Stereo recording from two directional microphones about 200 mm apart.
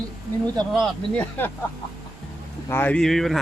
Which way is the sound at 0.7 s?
5° left (ahead or behind).